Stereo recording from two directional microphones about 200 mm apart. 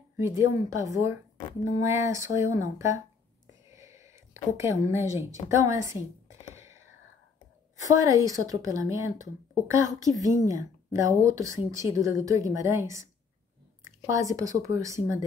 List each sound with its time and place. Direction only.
0.2 s a woman's voice: 15° right (ahead or behind)
3.7 s a sound: 15° right (ahead or behind)
7.8 s a woman's voice: 15° right (ahead or behind)